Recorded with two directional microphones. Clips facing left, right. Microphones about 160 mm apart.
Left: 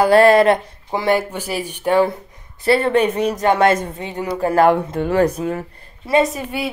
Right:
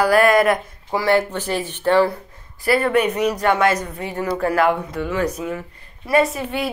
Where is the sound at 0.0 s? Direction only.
30° left (ahead or behind).